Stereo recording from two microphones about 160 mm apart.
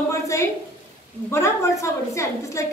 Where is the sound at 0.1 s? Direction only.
20° left (ahead or behind).